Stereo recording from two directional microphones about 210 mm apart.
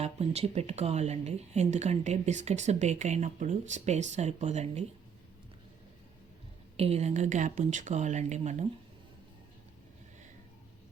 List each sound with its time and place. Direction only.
0.0 s speech: 30° right (ahead or behind)
6.7 s speech: 30° right (ahead or behind)